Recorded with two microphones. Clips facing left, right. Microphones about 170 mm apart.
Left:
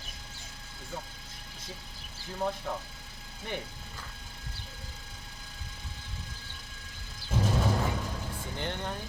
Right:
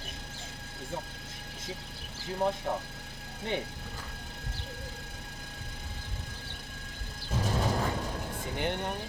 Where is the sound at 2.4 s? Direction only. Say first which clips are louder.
Right 3 dB; 20° right (ahead or behind).